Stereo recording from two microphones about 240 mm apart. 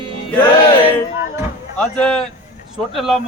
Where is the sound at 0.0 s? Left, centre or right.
Right.